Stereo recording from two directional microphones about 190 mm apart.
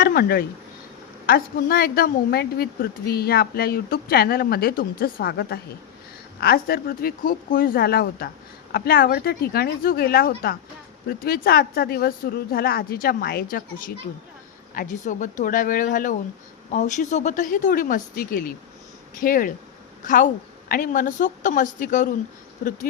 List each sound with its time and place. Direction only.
0.0 s a woman's voice: 50° left (ahead or behind)